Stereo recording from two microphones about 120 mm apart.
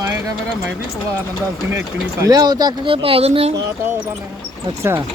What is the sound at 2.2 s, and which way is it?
Speech, 30° right (ahead or behind).